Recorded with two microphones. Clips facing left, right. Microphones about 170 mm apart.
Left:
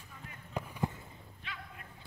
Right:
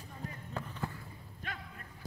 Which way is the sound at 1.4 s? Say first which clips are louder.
Right 3 dB; 45° right (ahead or behind).